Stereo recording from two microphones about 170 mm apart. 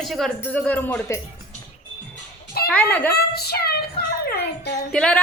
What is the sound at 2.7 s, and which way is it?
Speech, 10° left (ahead or behind).